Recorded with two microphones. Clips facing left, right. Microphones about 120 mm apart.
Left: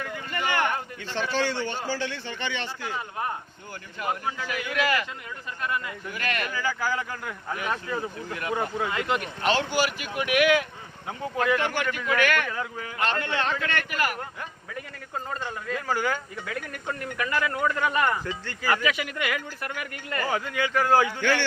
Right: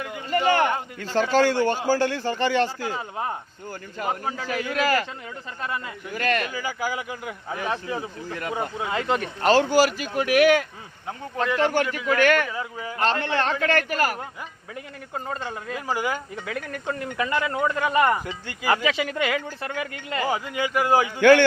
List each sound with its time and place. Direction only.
0.3 s a man's voice: 30° right (ahead or behind)
4.0 s a man's voice: 35° right (ahead or behind)
5.6 s a man's voice: 30° right (ahead or behind)
6.5 s speech: 15° right (ahead or behind)
7.5 s a man's voice: 30° right (ahead or behind)
8.9 s a man's voice: 30° right (ahead or behind)
11.5 s a man's voice: 35° right (ahead or behind)
15.3 s speech: 15° right (ahead or behind)
21.2 s a man's voice: 55° right (ahead or behind)